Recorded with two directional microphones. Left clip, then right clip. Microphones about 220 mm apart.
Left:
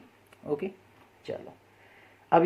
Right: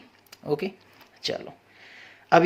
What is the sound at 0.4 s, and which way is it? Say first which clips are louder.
Speech: right 4 dB; 25° right (ahead or behind).